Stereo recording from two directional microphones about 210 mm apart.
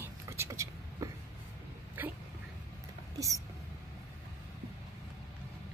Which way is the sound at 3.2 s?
15° right (ahead or behind).